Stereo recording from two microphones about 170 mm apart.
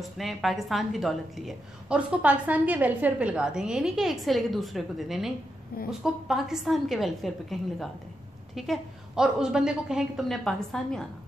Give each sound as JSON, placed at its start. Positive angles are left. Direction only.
{"t": 0.0, "sound": "a woman's voice", "side_deg": 0}